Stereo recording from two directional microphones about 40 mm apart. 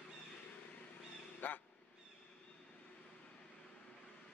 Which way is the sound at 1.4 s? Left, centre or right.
Left.